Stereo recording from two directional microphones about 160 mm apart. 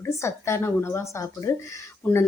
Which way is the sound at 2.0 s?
10° left (ahead or behind).